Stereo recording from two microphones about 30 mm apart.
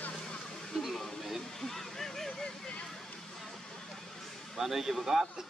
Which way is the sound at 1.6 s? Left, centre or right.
Centre.